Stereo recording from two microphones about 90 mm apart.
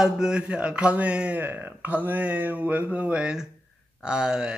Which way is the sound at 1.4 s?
25° right (ahead or behind).